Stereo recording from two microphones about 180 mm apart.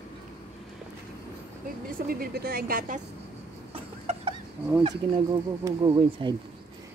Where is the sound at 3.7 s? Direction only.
30° right (ahead or behind).